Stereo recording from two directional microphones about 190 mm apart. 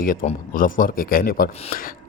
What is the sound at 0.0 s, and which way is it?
Speech, 45° left (ahead or behind).